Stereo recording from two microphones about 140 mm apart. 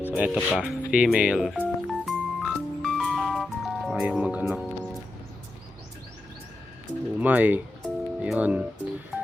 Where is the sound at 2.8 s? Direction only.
Centre (ahead or behind).